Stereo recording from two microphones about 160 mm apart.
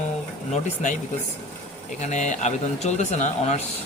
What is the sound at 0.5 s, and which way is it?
Speech, 50° left (ahead or behind).